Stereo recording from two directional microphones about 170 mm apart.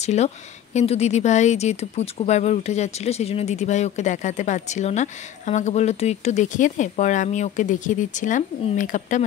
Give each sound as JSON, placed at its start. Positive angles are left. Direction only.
{"t": 0.0, "sound": "speech", "side_deg": 40}